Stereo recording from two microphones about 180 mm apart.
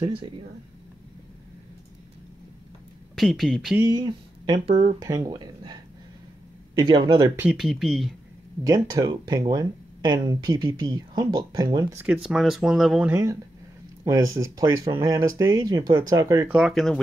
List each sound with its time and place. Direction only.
0.0 s speech: 30° right (ahead or behind)
3.2 s speech: centre (ahead or behind)
3.8 s speech: 25° right (ahead or behind)
7.3 s speech: 5° right (ahead or behind)
8.6 s speech: 20° right (ahead or behind)
12.0 s speech: 5° right (ahead or behind); by 16.4 s 20° right (ahead or behind)
16.4 s speech: centre (ahead or behind)